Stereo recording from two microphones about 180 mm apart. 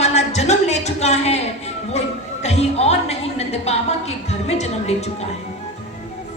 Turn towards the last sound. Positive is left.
turn(degrees=35)  # may be behind; listen again after turning